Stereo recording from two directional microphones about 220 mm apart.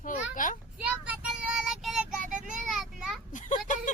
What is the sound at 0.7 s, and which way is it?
Child singing, 5° right (ahead or behind).